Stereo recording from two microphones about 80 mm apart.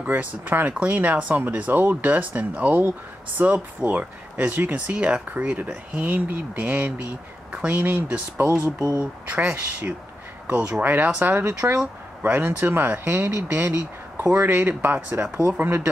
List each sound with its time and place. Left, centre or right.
0.0 s speech: right
8.7 s speech: right
9.0 s speech: right